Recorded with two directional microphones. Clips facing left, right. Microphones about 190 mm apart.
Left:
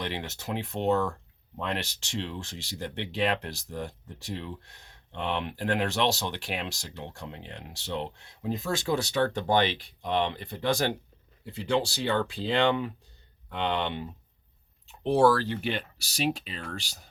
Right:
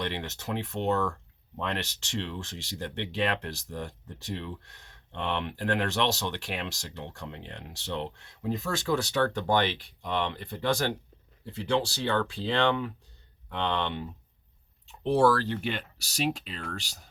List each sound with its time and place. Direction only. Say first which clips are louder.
0.1 s speech: even; 10° left (ahead or behind)